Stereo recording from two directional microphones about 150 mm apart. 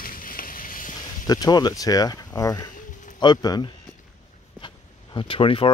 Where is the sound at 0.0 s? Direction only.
70° left (ahead or behind).